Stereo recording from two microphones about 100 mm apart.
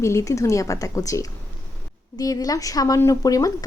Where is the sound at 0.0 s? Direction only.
30° left (ahead or behind).